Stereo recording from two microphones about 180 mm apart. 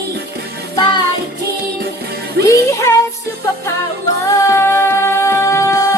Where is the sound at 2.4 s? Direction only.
15° left (ahead or behind).